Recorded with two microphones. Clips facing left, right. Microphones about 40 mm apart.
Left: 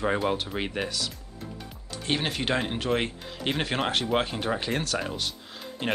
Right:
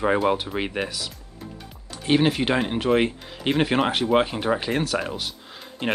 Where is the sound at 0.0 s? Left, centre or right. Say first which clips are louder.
Right 5 dB; centre.